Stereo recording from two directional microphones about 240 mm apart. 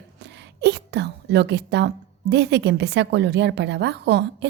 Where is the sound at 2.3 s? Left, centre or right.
Right.